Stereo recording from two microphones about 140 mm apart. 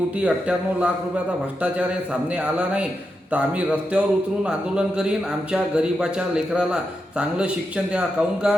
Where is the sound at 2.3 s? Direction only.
10° right (ahead or behind).